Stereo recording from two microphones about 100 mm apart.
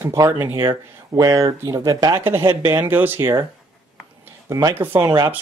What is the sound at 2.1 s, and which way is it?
Speech, 25° right (ahead or behind).